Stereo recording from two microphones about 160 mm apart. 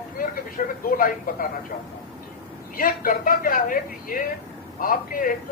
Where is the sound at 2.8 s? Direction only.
60° left (ahead or behind).